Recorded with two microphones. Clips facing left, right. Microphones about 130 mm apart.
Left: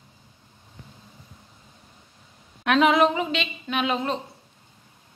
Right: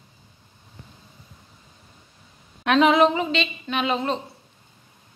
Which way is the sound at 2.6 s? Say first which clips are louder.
Right 2 dB; 5° left (ahead or behind).